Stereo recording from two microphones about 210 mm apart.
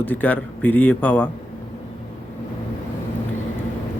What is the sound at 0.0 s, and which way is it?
A man's voice, 10° left (ahead or behind).